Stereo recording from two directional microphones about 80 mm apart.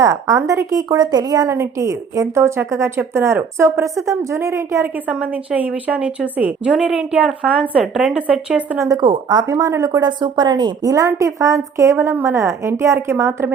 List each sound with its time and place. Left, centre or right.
0.0 s a woman's voice: right
5.0 s a woman's voice: centre
8.9 s a woman's voice: right
9.5 s a woman's voice: right
10.0 s a woman's voice: right